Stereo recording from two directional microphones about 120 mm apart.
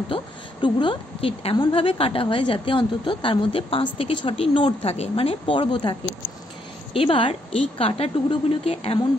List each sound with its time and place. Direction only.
0.1 s a woman's voice: 40° left (ahead or behind)